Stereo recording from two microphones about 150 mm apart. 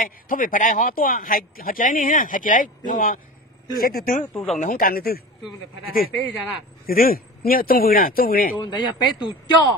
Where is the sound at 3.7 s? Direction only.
80° left.